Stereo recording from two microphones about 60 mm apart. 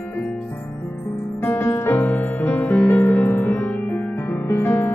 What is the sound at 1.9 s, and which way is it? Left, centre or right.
Music, left.